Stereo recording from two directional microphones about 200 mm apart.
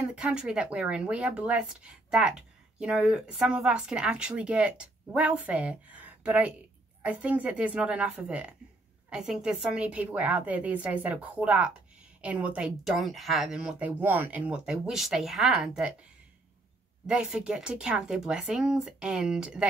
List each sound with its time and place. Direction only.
0.0 s a woman's voice: 5° right (ahead or behind)
17.0 s speech: 5° right (ahead or behind)